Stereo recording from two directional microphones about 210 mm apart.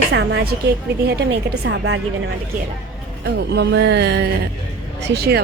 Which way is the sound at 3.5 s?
55° right (ahead or behind).